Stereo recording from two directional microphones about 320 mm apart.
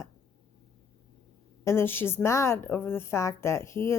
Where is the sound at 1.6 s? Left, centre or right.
Centre.